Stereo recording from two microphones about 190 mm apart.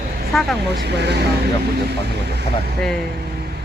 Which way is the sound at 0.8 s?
60° right (ahead or behind).